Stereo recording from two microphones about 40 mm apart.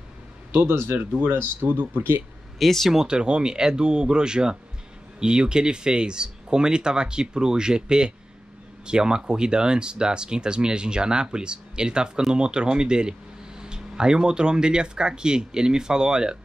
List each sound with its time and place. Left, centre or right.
0.5 s speech: right
1.1 s speech: right
2.6 s speech: centre
2.9 s speech: centre